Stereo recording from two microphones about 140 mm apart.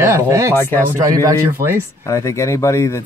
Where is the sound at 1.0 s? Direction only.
20° right (ahead or behind).